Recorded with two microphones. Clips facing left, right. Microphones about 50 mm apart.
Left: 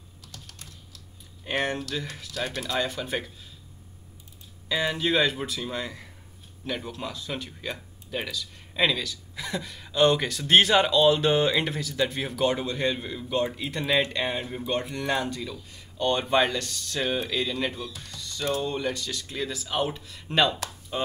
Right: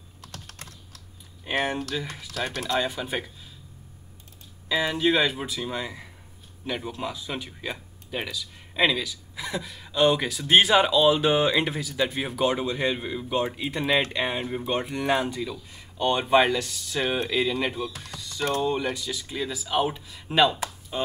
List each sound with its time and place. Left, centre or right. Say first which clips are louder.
0.2 s typing: right 4 dB; right
1.6 s speech: right 1 dB; centre
4.6 s speech: right 3 dB; centre
18.0 s music: right 1 dB; centre
18.6 s speech: right 3 dB; centre